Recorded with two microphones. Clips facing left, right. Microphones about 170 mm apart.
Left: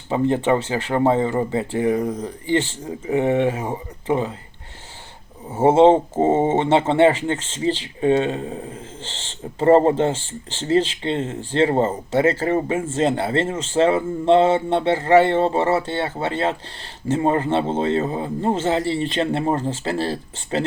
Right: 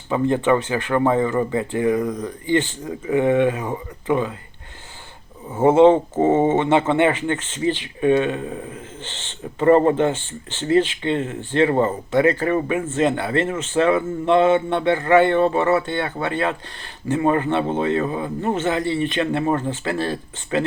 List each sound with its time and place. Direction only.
0.1 s speech: 25° left (ahead or behind)
5.5 s speech: 25° left (ahead or behind)